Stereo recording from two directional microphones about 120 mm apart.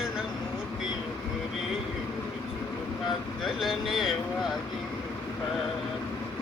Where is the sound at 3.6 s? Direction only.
5° right (ahead or behind).